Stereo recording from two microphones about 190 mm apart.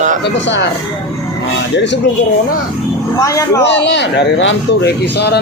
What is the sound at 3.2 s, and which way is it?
Speech, 15° left (ahead or behind).